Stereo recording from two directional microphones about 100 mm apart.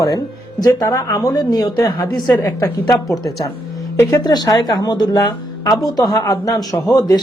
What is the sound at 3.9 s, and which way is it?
Speech, 25° left (ahead or behind).